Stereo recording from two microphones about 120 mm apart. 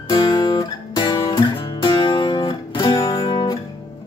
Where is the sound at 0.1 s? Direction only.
40° left (ahead or behind).